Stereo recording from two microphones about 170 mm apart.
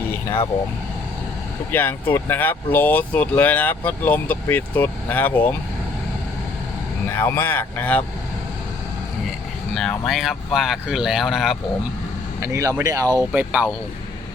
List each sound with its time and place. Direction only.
1.7 s speech: 10° left (ahead or behind)
7.2 s speech: 15° left (ahead or behind)
9.7 s speech: centre (ahead or behind)
12.4 s speech: 15° right (ahead or behind)
13.3 s speech: 10° right (ahead or behind)